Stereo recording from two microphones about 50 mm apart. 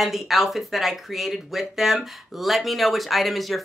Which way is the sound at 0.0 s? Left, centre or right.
Centre.